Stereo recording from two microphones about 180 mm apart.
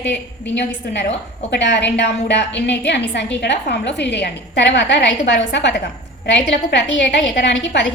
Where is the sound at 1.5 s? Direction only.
70° left (ahead or behind).